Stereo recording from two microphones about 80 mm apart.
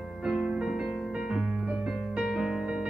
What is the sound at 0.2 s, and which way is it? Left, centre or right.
Music, centre.